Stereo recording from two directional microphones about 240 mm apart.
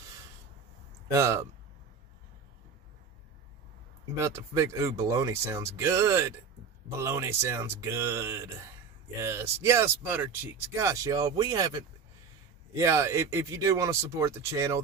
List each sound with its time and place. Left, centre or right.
1.1 s speech: centre
4.2 s speech: centre
12.7 s speech: centre